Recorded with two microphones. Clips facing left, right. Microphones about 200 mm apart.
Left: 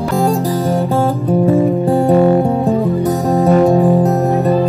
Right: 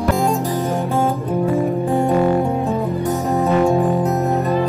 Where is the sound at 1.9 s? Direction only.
35° left (ahead or behind).